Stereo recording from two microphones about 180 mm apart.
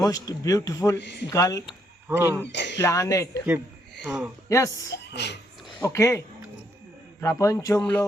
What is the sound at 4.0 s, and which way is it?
Speech, centre (ahead or behind).